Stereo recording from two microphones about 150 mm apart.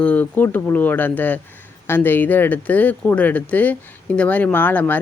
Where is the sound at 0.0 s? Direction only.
10° left (ahead or behind).